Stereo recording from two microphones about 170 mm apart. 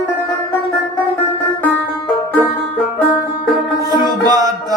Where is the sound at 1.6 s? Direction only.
10° left (ahead or behind).